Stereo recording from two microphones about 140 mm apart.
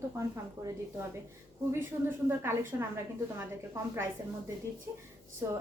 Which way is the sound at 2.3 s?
15° right (ahead or behind).